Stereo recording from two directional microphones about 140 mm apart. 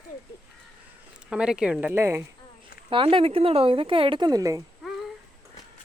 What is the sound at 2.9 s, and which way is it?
Speech, 40° right (ahead or behind).